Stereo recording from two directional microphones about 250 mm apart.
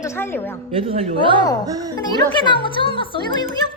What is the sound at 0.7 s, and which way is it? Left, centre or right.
A woman's voice, right.